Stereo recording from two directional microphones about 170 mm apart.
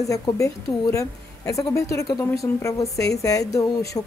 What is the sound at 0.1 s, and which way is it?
A woman's voice, 20° left (ahead or behind).